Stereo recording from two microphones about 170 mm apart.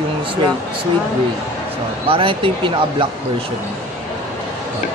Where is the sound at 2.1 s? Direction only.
30° right (ahead or behind).